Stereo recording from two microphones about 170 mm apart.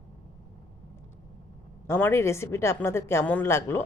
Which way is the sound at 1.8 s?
15° left (ahead or behind).